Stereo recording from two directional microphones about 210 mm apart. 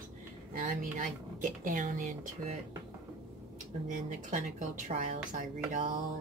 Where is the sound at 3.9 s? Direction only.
35° right (ahead or behind).